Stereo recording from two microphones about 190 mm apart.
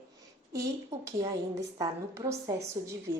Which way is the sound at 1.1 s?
20° right (ahead or behind).